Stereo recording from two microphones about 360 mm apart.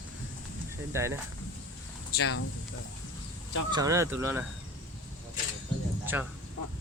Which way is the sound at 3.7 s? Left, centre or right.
Centre.